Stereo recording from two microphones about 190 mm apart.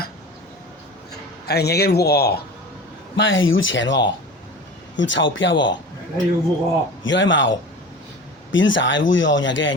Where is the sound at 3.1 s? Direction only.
85° left.